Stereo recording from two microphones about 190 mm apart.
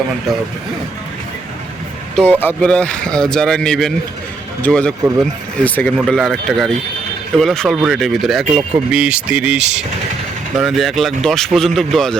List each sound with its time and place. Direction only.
0.3 s a man's voice: centre (ahead or behind)
2.4 s a man's voice: 10° left (ahead or behind)